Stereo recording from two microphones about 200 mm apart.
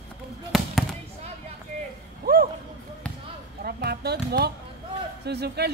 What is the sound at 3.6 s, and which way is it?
Music, 50° right (ahead or behind).